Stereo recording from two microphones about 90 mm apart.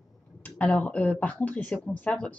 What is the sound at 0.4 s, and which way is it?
Speech, 20° left (ahead or behind).